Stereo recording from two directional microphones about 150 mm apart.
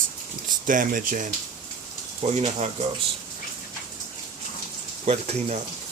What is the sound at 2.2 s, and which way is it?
Speech, 45° right (ahead or behind).